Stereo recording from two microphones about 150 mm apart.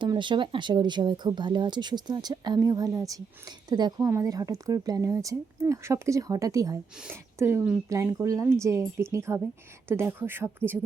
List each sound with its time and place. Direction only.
0.0 s a woman's voice: 30° right (ahead or behind); by 10.8 s 15° right (ahead or behind)